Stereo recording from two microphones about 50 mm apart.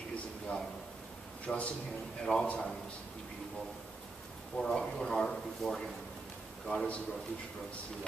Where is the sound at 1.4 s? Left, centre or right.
Left.